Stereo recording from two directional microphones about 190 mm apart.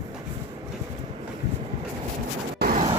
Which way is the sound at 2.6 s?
45° right (ahead or behind).